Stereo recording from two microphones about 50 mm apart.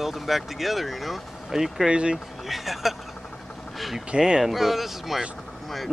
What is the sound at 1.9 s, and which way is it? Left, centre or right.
Speech, right.